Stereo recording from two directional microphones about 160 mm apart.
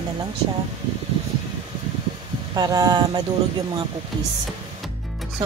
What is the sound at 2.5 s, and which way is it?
Speech, 25° right (ahead or behind).